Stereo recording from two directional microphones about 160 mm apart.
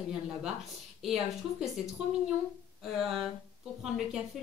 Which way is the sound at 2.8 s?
Centre (ahead or behind).